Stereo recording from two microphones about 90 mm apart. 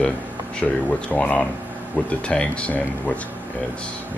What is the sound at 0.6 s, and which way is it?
Speech, 15° left (ahead or behind).